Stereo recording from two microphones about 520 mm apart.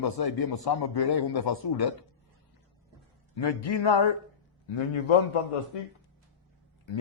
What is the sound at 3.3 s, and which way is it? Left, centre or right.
A man's voice, left.